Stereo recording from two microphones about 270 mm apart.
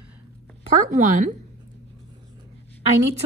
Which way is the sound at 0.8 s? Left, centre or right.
Right.